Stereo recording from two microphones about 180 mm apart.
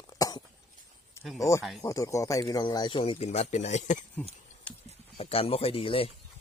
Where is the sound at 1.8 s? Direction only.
15° left (ahead or behind); by 3.9 s 40° left (ahead or behind).